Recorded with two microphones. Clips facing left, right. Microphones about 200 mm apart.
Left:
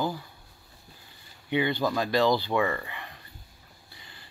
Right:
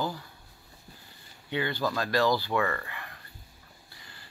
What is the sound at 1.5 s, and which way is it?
Speech, 15° left (ahead or behind).